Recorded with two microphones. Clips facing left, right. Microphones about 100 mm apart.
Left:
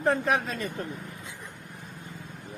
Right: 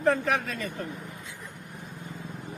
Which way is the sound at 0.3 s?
30° left (ahead or behind).